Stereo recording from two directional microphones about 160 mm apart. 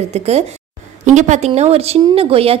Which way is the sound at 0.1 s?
40° right (ahead or behind).